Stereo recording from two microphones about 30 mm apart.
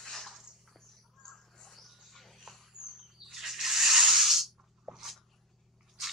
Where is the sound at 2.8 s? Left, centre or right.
Right.